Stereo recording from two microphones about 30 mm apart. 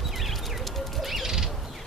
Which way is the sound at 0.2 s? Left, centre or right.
Centre.